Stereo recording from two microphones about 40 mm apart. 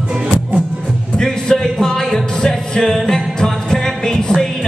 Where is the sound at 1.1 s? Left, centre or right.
Centre.